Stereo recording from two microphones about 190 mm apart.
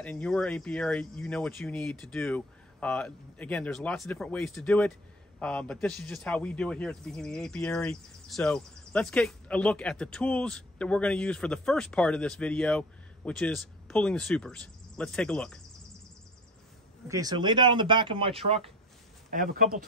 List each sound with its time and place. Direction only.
0.0 s a man's voice: 5° left (ahead or behind)
17.1 s speech: 20° right (ahead or behind)
19.3 s speech: 50° right (ahead or behind)